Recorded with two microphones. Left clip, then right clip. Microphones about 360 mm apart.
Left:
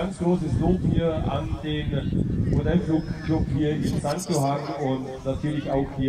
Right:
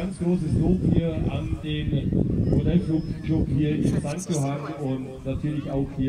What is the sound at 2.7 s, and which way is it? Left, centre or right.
Speech, left.